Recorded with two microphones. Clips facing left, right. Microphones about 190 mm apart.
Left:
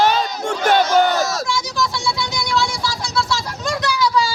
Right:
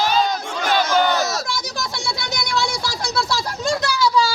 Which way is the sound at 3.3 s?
30° right (ahead or behind).